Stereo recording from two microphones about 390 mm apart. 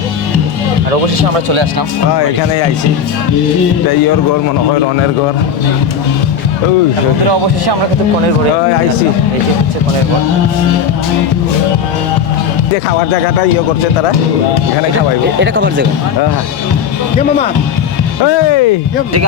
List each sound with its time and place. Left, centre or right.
15.4 s speech: right
18.3 s speech: left